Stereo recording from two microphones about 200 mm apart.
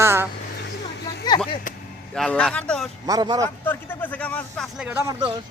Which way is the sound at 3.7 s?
10° left (ahead or behind).